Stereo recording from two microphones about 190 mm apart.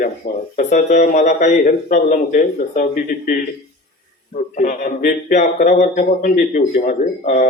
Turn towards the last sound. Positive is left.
turn(degrees=45)  # may be behind; listen again after turning